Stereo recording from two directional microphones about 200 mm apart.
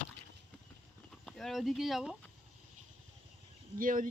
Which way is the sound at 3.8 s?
40° right (ahead or behind).